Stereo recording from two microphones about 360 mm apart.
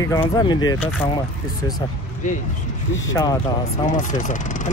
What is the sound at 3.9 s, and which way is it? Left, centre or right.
Speech, left.